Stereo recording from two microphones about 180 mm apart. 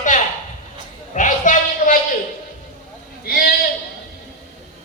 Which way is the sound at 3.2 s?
55° left (ahead or behind).